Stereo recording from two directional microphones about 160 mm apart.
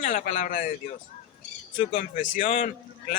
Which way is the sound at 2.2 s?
55° left (ahead or behind).